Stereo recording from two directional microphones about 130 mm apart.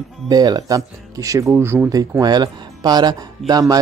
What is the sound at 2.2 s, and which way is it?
Speech, 30° right (ahead or behind).